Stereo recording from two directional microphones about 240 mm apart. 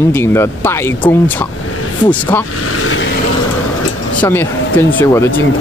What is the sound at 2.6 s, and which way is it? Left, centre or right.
Speech, left.